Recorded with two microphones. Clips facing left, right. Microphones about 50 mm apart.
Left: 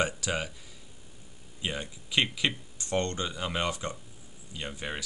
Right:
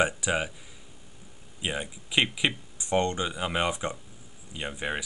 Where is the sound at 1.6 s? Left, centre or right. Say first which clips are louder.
Right 3 dB; centre.